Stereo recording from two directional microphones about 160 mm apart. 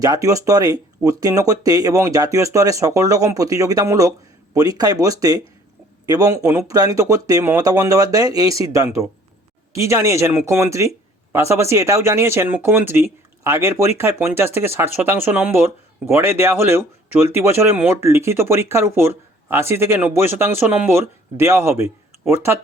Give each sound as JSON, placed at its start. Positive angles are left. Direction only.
{"t": 0.0, "sound": "speech", "side_deg": -20}
{"t": 9.7, "sound": "speech", "side_deg": -20}